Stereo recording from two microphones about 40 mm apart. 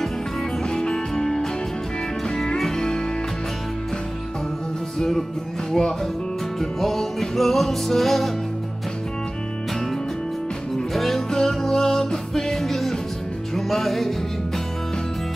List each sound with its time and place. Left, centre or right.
0.7 s music: centre
4.9 s music: centre
10.9 s music: centre